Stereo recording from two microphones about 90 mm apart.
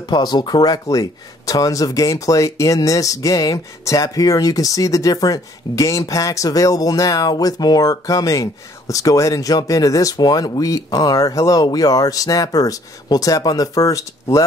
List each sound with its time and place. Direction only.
0.1 s speech: 50° left (ahead or behind)